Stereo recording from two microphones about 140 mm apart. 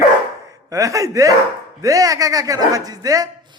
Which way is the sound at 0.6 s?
25° right (ahead or behind).